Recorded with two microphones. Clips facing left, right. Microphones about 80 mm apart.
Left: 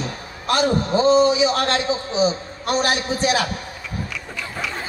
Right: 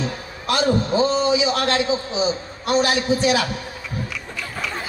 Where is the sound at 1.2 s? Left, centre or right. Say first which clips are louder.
Left 2 dB; left.